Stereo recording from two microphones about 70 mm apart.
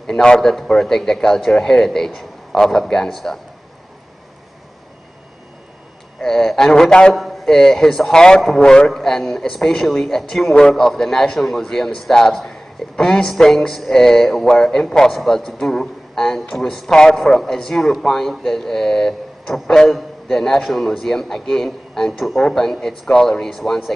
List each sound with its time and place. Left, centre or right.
0.0 s speech: centre
6.2 s a man's voice: centre
7.2 s a man's voice: centre